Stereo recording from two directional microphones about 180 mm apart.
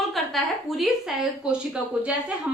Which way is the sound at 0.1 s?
Centre (ahead or behind).